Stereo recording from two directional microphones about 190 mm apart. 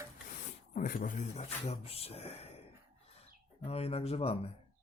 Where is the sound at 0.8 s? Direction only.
45° left (ahead or behind).